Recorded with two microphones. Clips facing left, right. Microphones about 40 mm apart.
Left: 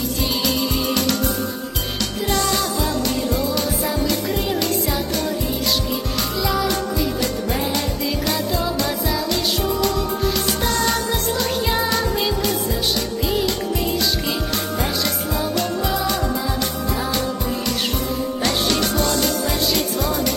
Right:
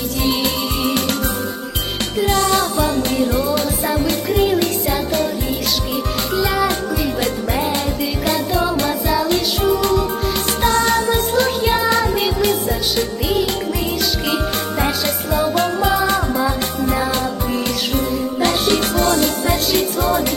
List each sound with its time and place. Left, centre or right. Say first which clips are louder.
0.3 s music: right 3 dB; right
8.2 s music: right 6 dB; right
15.0 s music: right 4 dB; right
18.7 s music: right 4 dB; right